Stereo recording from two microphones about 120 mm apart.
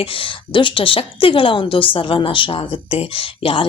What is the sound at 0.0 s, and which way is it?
A woman's voice, 45° left (ahead or behind).